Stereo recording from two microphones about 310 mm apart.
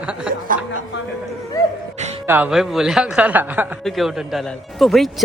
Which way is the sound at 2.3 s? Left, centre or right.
Centre.